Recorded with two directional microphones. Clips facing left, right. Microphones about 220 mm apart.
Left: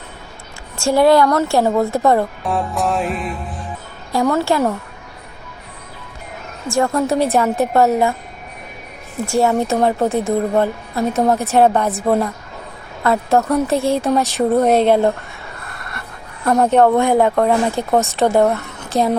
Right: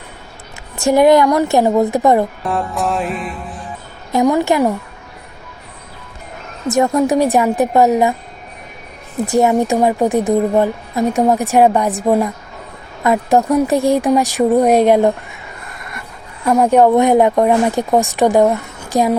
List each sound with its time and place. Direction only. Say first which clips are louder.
0.8 s a woman's voice: right 2 dB; 20° right (ahead or behind)
2.4 s music: right 1 dB; centre (ahead or behind)
4.1 s a woman's voice: right 3 dB; 15° right (ahead or behind)
6.7 s a woman's voice: right 3 dB; 20° right (ahead or behind)
9.2 s a woman's voice: right 3 dB; 20° right (ahead or behind)
16.5 s a woman's voice: right 2 dB; 10° right (ahead or behind)